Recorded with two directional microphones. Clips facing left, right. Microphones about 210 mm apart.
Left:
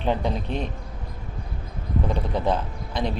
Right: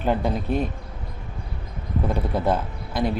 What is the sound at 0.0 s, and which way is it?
Speech, 5° right (ahead or behind).